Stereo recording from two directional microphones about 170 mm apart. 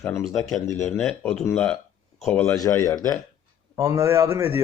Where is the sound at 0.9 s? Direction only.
5° left (ahead or behind).